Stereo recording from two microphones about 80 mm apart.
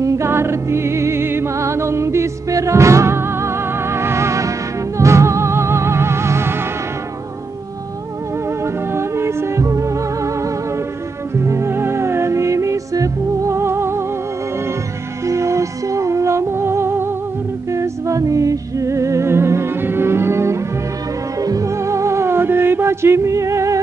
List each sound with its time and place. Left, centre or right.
0.0 s music: right
8.9 s music: right
15.2 s music: right
17.7 s music: right
21.4 s music: right